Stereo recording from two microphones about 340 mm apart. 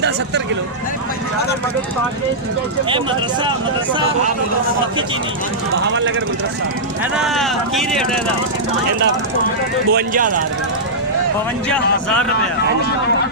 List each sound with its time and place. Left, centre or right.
5.7 s speech: right
7.0 s speech: centre
9.9 s speech: right
11.7 s speech: centre